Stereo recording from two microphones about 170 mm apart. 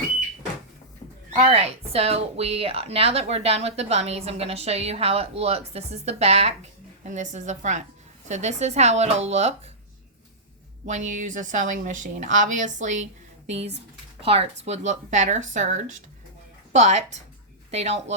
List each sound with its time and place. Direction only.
1.4 s speech: 35° right (ahead or behind)
10.8 s a woman's voice: 45° right (ahead or behind)